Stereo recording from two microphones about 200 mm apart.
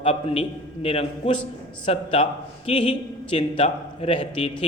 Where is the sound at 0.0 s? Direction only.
30° left (ahead or behind).